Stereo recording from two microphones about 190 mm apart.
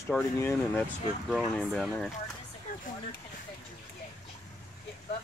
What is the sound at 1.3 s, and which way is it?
Speech, centre (ahead or behind).